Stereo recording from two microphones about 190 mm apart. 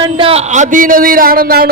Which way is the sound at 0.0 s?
30° right (ahead or behind).